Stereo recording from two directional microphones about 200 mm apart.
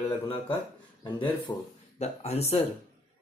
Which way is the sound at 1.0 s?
20° left (ahead or behind).